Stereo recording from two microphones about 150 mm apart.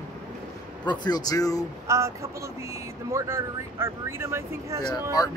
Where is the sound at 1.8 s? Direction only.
20° right (ahead or behind).